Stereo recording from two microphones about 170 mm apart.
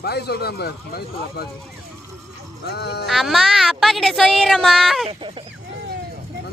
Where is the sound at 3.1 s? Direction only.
Centre (ahead or behind).